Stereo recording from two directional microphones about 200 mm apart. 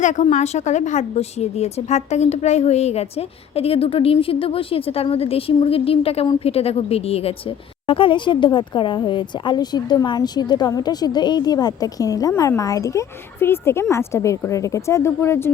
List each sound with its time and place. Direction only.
0.0 s a woman's voice: 35° left (ahead or behind); by 15.5 s 10° left (ahead or behind)